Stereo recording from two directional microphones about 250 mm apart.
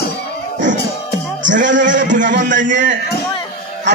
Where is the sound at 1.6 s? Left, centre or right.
Right.